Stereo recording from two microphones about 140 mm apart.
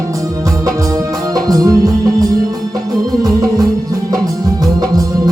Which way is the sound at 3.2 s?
25° right (ahead or behind).